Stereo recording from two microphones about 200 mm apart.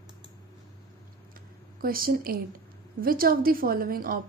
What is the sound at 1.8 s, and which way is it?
A woman's voice, 45° right (ahead or behind).